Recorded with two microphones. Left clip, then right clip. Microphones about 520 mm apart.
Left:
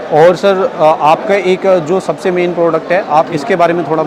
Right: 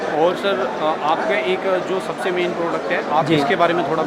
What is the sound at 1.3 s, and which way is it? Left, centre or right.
Speech, left.